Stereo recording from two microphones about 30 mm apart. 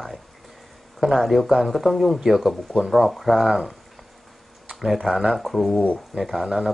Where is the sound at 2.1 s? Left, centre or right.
Centre.